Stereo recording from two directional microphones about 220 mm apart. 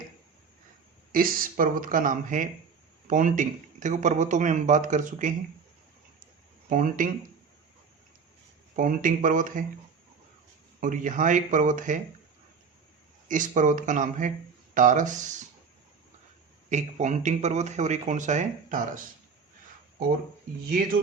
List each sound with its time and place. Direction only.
1.1 s speech: 40° right (ahead or behind)
6.7 s speech: 35° right (ahead or behind)
8.7 s speech: 35° right (ahead or behind)
10.8 s speech: 35° right (ahead or behind)
13.2 s speech: 35° right (ahead or behind)
16.6 s speech: 35° right (ahead or behind)